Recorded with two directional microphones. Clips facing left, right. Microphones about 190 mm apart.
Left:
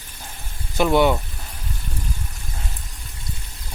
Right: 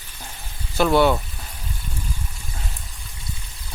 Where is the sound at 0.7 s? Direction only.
15° left (ahead or behind).